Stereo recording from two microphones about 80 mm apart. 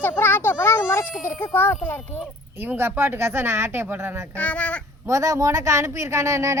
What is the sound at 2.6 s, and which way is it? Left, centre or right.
A woman's voice, right.